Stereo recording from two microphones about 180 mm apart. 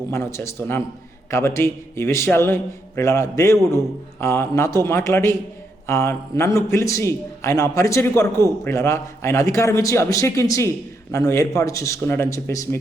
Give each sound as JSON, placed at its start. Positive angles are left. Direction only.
{"t": 0.1, "sound": "a man's voice", "side_deg": 15}